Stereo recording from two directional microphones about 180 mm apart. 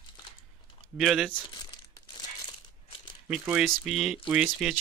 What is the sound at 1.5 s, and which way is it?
Crumpling, 25° left (ahead or behind).